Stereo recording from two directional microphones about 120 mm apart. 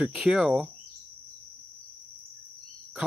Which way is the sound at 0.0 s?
5° right (ahead or behind).